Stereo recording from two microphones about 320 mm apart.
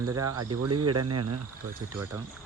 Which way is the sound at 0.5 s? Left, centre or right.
Right.